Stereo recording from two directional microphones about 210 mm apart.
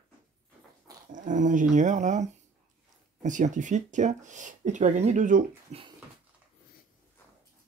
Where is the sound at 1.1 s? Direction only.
35° right (ahead or behind).